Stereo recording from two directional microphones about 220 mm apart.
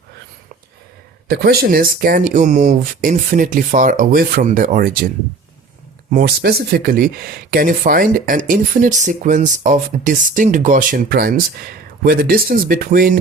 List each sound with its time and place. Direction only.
1.3 s speech: 45° right (ahead or behind)
6.1 s speech: 40° right (ahead or behind)